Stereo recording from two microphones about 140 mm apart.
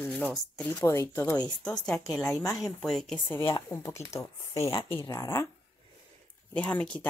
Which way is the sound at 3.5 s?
20° left (ahead or behind).